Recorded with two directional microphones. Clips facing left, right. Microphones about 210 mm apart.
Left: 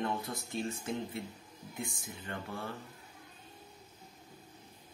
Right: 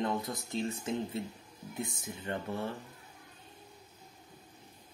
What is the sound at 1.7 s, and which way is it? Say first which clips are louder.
Speech: right 3 dB; 20° right (ahead or behind).